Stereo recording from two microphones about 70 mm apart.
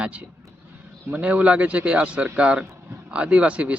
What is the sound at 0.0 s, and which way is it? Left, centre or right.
Speech, centre.